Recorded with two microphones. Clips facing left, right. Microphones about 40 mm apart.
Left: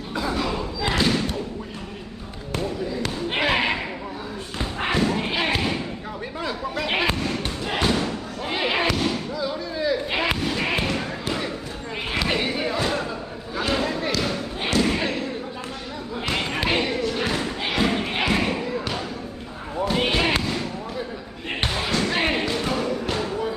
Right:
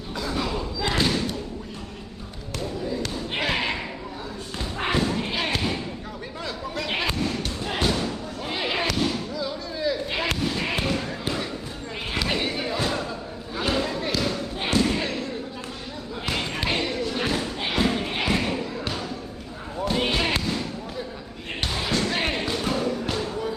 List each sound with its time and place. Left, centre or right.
0.9 s thump: centre
2.6 s basketball bounce: centre
4.5 s thump: centre
6.4 s a sound: centre
7.9 s thump: centre
12.1 s a sound: centre
14.2 s basketball bounce: centre
14.8 s slam: centre
16.3 s basketball bounce: centre
17.0 s thump: centre
17.3 s thump: centre
19.8 s basketball bounce: centre
21.9 s basketball bounce: centre
23.1 s a sound: centre